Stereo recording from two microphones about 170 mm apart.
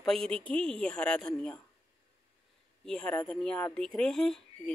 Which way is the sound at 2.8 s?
5° left (ahead or behind).